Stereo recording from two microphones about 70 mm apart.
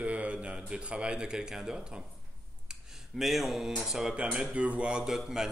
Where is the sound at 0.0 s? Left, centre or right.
Centre.